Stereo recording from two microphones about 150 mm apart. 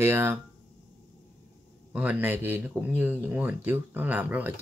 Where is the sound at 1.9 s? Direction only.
10° right (ahead or behind).